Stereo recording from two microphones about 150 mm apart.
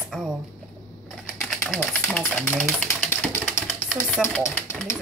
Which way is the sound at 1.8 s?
10° left (ahead or behind).